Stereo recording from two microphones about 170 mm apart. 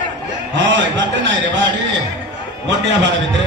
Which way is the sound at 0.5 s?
90° right.